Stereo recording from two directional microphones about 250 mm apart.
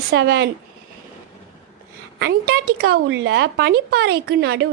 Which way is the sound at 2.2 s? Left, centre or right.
Right.